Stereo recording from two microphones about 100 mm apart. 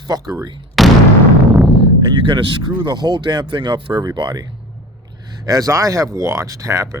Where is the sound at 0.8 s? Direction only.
Centre (ahead or behind).